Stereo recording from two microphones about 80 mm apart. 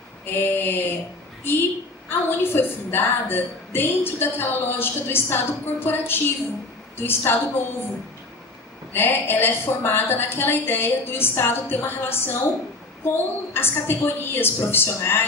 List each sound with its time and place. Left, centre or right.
0.3 s a woman's voice: left
2.0 s a woman's voice: left
8.9 s a woman's voice: left